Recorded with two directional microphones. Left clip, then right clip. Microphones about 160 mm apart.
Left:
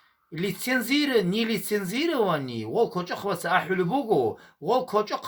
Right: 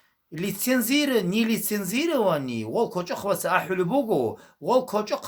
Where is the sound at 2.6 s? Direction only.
15° right (ahead or behind).